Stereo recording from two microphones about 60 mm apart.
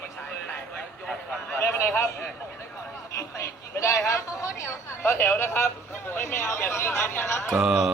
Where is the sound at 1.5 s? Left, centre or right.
Left.